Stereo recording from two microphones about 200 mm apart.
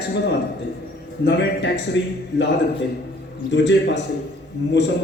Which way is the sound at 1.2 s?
60° left (ahead or behind).